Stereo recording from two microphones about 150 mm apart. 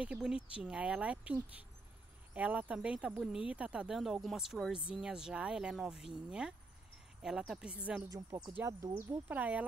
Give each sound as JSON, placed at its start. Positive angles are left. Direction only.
{"t": 0.0, "sound": "speech", "side_deg": -5}
{"t": 8.1, "sound": "speech", "side_deg": -25}
{"t": 8.5, "sound": "speech", "side_deg": -15}